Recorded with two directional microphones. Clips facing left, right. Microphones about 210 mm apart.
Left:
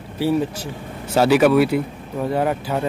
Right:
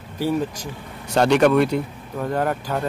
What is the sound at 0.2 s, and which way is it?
Speech, 10° left (ahead or behind).